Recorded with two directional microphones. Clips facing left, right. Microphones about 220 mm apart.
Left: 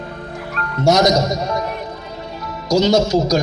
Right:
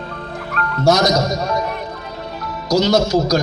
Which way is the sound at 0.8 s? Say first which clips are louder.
Left 1 dB; 20° left (ahead or behind).